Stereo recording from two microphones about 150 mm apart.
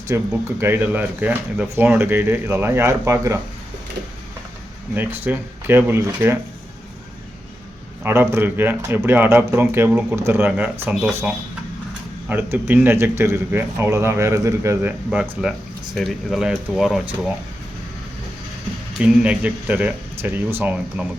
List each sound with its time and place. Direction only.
0.1 s speech: 20° right (ahead or behind)
4.9 s speech: 10° right (ahead or behind)
8.0 s speech: 15° right (ahead or behind)
12.3 s speech: 15° right (ahead or behind)
18.9 s speech: 5° right (ahead or behind)